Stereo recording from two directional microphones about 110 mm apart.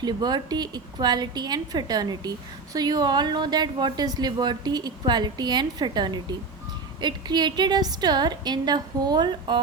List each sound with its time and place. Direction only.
0.0 s a woman's voice: 40° right (ahead or behind)